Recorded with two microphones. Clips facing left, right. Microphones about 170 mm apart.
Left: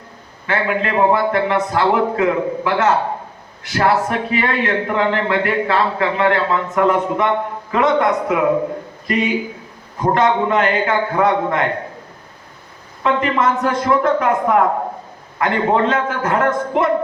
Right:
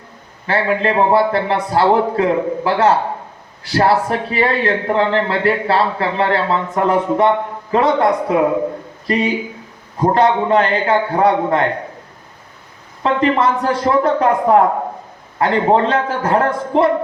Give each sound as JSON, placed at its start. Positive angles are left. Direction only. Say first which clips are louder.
{"t": 0.4, "sound": "a man's voice", "louder": "right 3 dB", "side_deg": -30}
{"t": 13.0, "sound": "a man's voice", "louder": "right 2 dB", "side_deg": -35}